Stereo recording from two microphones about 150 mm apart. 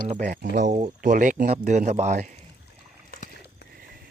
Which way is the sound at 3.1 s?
90° left.